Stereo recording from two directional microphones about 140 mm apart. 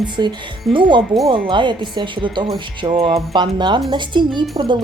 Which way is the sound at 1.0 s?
Centre (ahead or behind).